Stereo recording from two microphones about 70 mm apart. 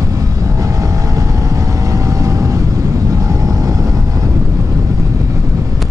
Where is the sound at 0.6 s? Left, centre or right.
Right.